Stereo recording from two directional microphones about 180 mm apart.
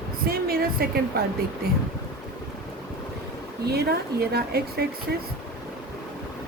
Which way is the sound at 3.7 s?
60° right (ahead or behind).